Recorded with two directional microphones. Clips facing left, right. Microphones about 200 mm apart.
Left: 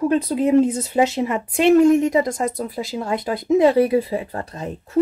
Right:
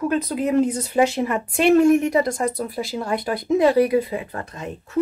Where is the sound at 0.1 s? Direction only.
30° left (ahead or behind).